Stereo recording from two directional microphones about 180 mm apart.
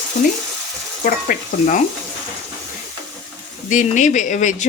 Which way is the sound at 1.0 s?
50° left (ahead or behind).